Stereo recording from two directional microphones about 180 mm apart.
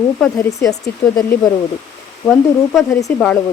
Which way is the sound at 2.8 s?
15° left (ahead or behind).